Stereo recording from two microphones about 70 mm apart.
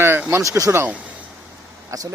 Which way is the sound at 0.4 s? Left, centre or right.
Right.